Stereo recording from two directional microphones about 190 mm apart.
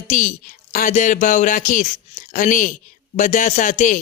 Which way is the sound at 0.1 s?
40° left (ahead or behind).